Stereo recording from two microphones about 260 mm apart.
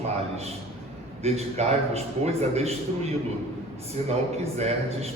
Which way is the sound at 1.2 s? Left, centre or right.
Right.